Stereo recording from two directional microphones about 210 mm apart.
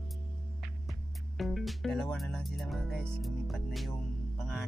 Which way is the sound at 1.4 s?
Centre (ahead or behind).